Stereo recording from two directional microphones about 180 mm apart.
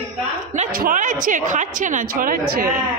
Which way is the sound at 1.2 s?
45° right (ahead or behind).